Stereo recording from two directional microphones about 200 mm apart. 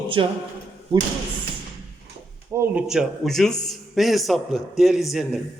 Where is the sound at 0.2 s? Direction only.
25° right (ahead or behind).